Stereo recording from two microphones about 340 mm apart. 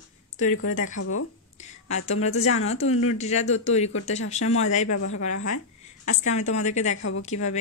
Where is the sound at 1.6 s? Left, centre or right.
Centre.